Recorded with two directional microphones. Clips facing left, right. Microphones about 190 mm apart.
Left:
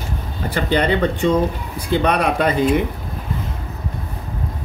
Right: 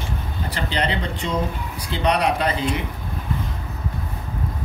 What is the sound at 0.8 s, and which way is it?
Speech, 55° left (ahead or behind).